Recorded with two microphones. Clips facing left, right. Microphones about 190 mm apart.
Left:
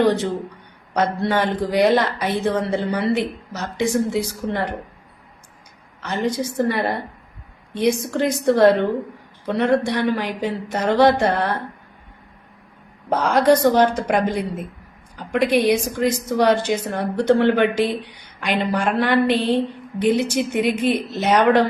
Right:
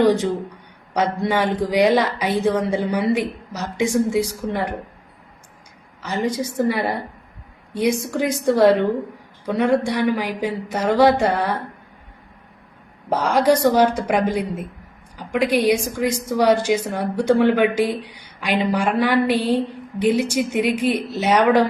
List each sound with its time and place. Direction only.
0.0 s speech: 15° right (ahead or behind)
6.0 s speech: 10° right (ahead or behind)
13.1 s speech: 10° right (ahead or behind)